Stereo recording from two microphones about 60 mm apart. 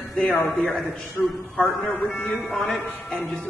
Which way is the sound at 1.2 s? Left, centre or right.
Left.